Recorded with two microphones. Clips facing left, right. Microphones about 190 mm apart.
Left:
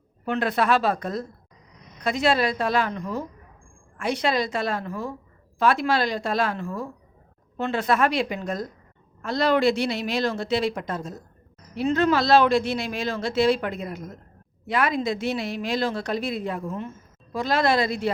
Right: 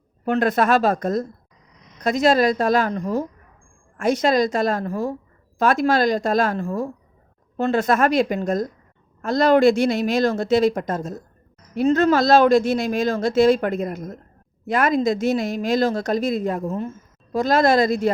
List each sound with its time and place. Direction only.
0.3 s speech: 45° right (ahead or behind)